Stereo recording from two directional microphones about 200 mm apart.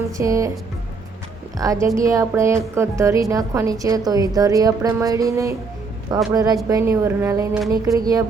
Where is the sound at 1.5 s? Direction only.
15° right (ahead or behind).